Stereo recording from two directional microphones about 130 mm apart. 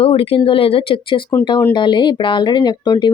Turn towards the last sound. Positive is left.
turn(degrees=35)  # may be behind; listen again after turning